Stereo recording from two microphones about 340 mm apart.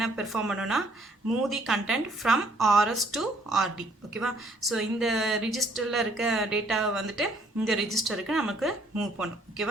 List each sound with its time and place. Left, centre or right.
0.0 s a woman's voice: centre